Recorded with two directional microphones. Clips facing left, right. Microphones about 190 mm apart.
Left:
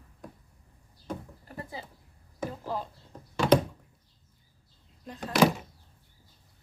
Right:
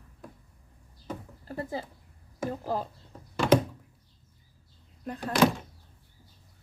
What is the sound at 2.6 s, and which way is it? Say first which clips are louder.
Speech: right 3 dB; 45° right (ahead or behind).